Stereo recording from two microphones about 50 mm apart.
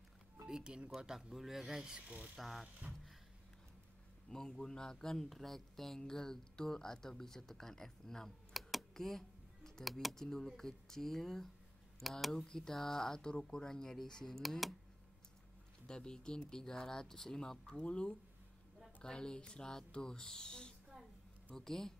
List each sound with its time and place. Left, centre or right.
0.5 s speech: centre
1.0 s speech: centre
2.0 s a sound: right
2.3 s speech: centre
4.3 s speech: centre
8.7 s computer keyboard: centre
10.0 s speech: centre
15.9 s speech: centre